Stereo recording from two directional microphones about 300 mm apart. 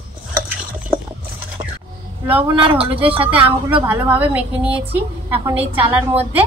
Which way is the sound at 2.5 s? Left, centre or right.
Centre.